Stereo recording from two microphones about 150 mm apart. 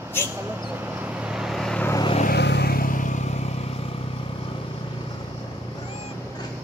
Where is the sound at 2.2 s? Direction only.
90° left; by 4.1 s 40° left (ahead or behind).